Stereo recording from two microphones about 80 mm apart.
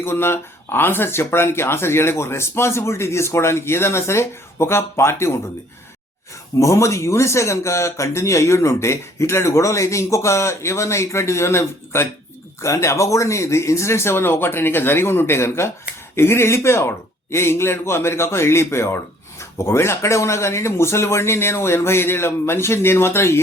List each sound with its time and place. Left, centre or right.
0.0 s speech: left
6.6 s speech: left